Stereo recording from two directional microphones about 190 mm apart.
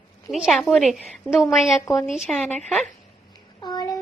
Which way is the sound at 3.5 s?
20° left (ahead or behind).